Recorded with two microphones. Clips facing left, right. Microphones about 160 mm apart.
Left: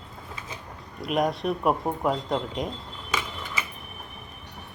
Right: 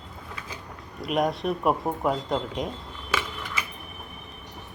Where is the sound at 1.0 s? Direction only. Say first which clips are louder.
Even; centre (ahead or behind).